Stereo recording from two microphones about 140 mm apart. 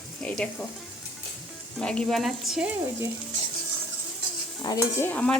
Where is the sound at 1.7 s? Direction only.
5° left (ahead or behind).